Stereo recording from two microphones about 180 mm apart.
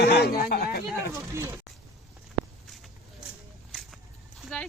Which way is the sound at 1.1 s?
15° right (ahead or behind).